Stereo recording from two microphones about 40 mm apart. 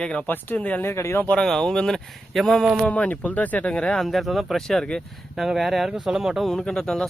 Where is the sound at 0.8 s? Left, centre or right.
Left.